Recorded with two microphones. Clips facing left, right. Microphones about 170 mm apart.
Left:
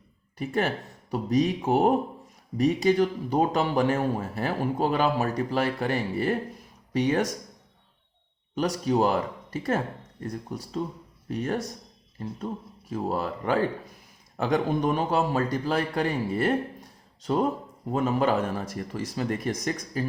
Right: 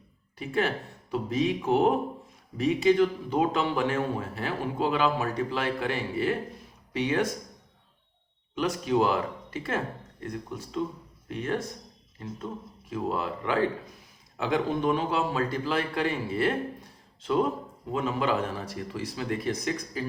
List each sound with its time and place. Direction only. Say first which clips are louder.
0.3 s a man's voice: left 1 dB; 45° left (ahead or behind)
8.5 s speech: left 1 dB; 40° left (ahead or behind)
12.9 s a man's voice: left 1 dB; 40° left (ahead or behind)
17.9 s a man's voice: left 3 dB; 45° left (ahead or behind)